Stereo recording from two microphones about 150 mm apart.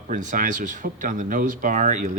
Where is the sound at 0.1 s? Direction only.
55° right (ahead or behind).